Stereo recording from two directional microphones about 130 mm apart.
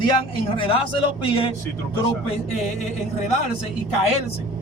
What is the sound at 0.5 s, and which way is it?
A man's voice, 45° left (ahead or behind).